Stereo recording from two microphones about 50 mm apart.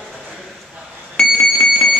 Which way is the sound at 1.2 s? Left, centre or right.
Centre.